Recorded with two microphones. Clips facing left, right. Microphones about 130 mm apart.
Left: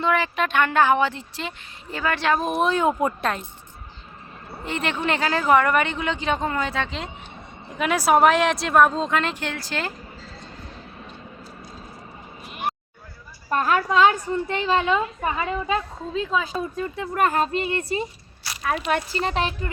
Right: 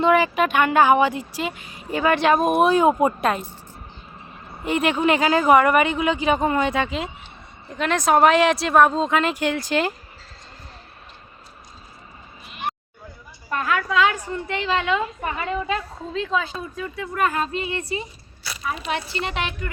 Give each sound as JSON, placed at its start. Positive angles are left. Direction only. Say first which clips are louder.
{"t": 0.0, "sound": "speech", "louder": "right 5 dB", "side_deg": -15}
{"t": 4.6, "sound": "speech", "louder": "right 6 dB", "side_deg": -10}
{"t": 7.8, "sound": "speech", "louder": "even", "side_deg": 10}
{"t": 13.5, "sound": "a woman's voice", "louder": "left 2 dB", "side_deg": 35}
{"t": 15.2, "sound": "a woman's voice", "louder": "left 2 dB", "side_deg": 20}
{"t": 16.5, "sound": "a woman's voice", "louder": "left 4 dB", "side_deg": 45}